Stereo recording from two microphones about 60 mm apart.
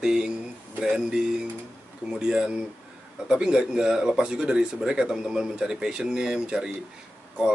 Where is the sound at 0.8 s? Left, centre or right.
Centre.